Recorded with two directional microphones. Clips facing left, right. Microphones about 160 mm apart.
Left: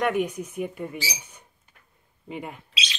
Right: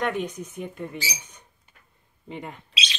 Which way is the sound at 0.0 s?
10° left (ahead or behind).